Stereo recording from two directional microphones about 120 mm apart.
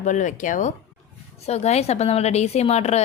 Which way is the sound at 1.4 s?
65° left (ahead or behind).